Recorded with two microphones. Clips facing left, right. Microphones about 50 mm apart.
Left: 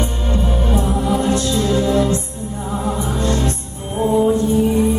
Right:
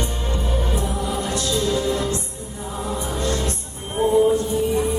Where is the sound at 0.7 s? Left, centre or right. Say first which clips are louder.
Left 7 dB; left.